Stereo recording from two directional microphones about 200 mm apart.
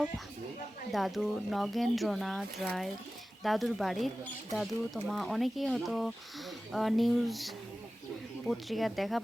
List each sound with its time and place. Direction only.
0.9 s speech: centre (ahead or behind)